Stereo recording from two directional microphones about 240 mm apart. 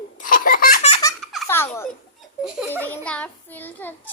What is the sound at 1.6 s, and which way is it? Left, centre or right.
Speech, centre.